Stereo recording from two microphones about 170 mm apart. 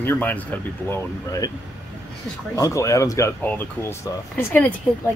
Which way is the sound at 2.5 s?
20° left (ahead or behind).